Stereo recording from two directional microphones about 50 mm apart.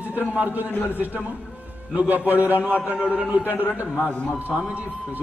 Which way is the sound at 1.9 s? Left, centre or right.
Right.